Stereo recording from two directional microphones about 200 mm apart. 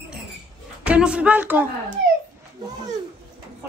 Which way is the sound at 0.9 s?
5° right (ahead or behind).